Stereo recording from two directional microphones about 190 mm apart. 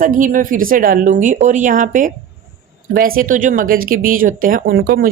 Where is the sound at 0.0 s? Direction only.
45° right (ahead or behind).